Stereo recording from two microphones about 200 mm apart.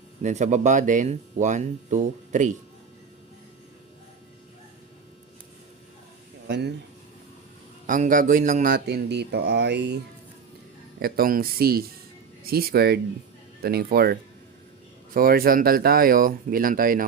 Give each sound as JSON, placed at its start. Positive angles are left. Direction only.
{"t": 0.2, "sound": "speech", "side_deg": -35}
{"t": 6.5, "sound": "speech", "side_deg": -55}
{"t": 7.9, "sound": "speech", "side_deg": -40}
{"t": 11.0, "sound": "speech", "side_deg": -45}